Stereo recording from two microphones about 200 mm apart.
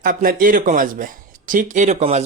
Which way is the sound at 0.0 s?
45° right (ahead or behind).